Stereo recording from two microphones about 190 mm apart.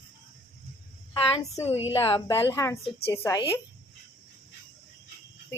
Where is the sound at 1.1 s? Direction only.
15° left (ahead or behind).